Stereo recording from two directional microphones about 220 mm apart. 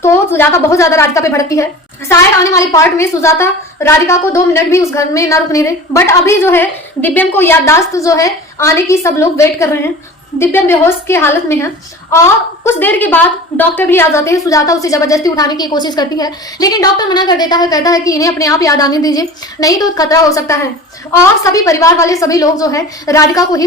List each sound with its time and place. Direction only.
0.0 s a woman's voice: 10° left (ahead or behind)